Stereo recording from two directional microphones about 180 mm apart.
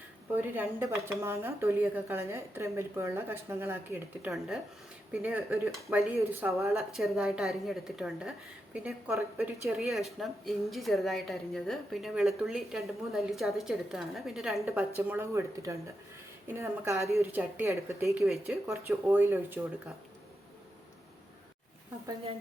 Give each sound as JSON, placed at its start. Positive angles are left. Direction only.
{"t": 0.5, "sound": "speech", "side_deg": -10}
{"t": 4.3, "sound": "a woman's voice", "side_deg": 0}
{"t": 14.6, "sound": "speech", "side_deg": -10}
{"t": 18.2, "sound": "a woman's voice", "side_deg": 0}
{"t": 18.7, "sound": "speech", "side_deg": -10}